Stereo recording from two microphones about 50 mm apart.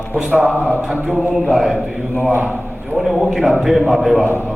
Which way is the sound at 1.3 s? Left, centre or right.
Centre.